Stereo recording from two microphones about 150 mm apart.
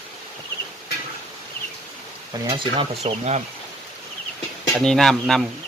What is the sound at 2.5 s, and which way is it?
Speech, 45° right (ahead or behind).